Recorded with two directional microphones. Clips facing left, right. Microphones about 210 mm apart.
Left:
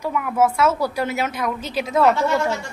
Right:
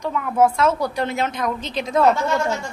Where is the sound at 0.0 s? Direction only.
5° left (ahead or behind).